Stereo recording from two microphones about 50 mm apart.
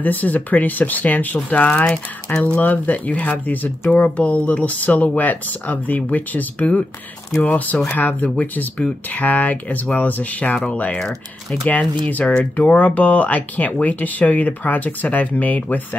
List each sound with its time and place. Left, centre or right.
0.0 s speech: left
2.2 s speech: left